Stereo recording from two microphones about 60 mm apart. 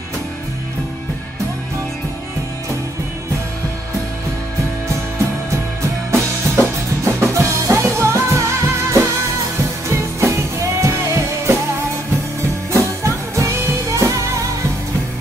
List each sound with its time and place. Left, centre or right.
5.5 s music: right
12.7 s music: right